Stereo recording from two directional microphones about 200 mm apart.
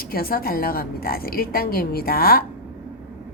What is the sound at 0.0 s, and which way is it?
A woman's voice, 50° left (ahead or behind).